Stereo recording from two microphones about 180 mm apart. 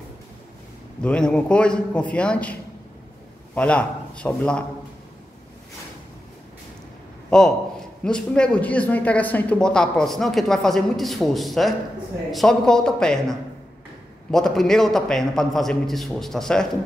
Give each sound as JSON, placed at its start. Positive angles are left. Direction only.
{"t": 1.0, "sound": "speech", "side_deg": 5}
{"t": 3.5, "sound": "a man's voice", "side_deg": 5}
{"t": 7.2, "sound": "a man's voice", "side_deg": 5}